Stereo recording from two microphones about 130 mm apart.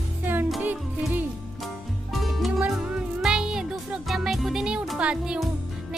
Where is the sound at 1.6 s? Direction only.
Centre (ahead or behind).